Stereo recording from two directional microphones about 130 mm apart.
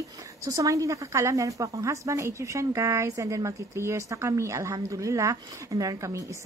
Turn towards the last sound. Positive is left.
turn(degrees=-25)  # may be behind; listen again after turning